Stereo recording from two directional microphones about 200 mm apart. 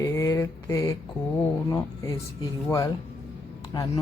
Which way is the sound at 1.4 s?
15° left (ahead or behind).